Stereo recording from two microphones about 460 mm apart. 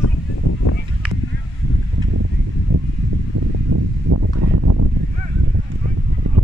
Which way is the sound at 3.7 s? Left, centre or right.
Right.